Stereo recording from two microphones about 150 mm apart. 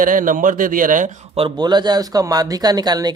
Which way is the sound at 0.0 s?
65° right (ahead or behind).